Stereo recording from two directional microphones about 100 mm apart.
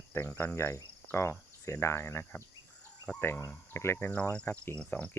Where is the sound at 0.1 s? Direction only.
20° left (ahead or behind).